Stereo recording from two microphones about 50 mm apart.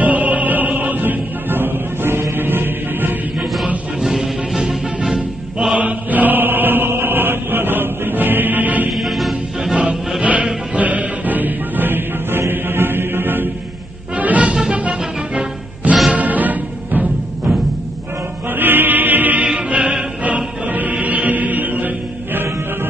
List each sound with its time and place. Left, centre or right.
0.0 s music: right
4.0 s music: centre
5.8 s chant: right
8.9 s music: centre
10.2 s music: right
14.1 s music: right
14.5 s music: centre
14.8 s music: right
18.5 s chant: right
19.4 s music: right
20.2 s music: right